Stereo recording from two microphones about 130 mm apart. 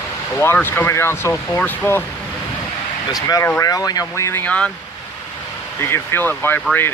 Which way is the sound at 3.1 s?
30° left (ahead or behind).